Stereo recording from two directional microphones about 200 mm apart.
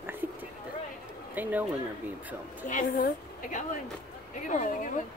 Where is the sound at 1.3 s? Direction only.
10° right (ahead or behind).